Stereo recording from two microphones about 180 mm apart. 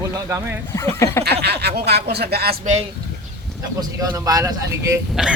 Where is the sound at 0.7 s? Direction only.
15° left (ahead or behind).